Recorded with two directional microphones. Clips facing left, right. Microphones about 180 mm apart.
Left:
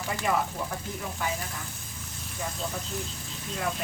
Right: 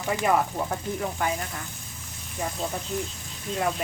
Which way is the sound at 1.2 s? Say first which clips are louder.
Right 4 dB; 55° right (ahead or behind).